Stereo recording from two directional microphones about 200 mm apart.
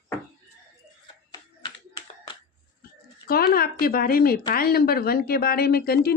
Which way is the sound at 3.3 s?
50° left (ahead or behind).